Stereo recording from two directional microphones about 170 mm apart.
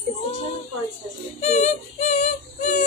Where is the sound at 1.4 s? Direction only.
40° left (ahead or behind).